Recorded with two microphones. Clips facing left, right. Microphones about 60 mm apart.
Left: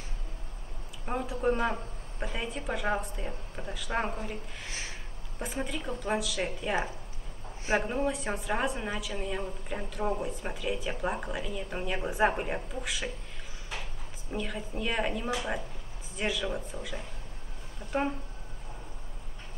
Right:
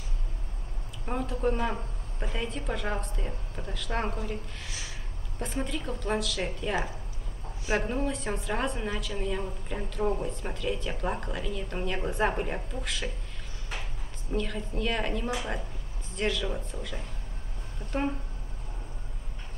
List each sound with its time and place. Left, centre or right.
1.0 s a woman's voice: centre
4.6 s a sound: left
5.4 s a woman's voice: centre
14.3 s a woman's voice: centre